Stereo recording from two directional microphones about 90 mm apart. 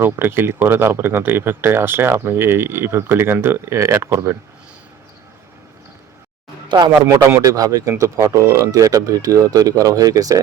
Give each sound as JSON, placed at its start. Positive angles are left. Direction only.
{"t": 0.0, "sound": "speech", "side_deg": -25}
{"t": 6.7, "sound": "a man's voice", "side_deg": -60}
{"t": 7.0, "sound": "speech", "side_deg": -30}
{"t": 7.4, "sound": "speech", "side_deg": -40}